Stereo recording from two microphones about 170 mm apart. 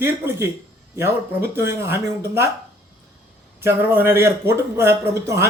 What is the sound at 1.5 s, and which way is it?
Speech, 15° right (ahead or behind).